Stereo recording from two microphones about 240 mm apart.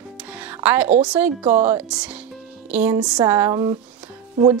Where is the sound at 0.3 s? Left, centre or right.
Centre.